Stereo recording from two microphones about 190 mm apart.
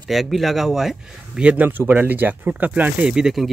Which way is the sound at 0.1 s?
Centre (ahead or behind).